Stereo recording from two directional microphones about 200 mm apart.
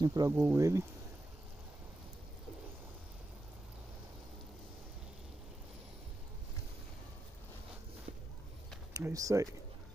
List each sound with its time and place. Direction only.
0.0 s speech: 20° right (ahead or behind)
8.9 s speech: 15° right (ahead or behind)